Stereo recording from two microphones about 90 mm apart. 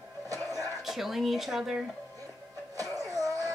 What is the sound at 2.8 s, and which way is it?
Music, 40° right (ahead or behind).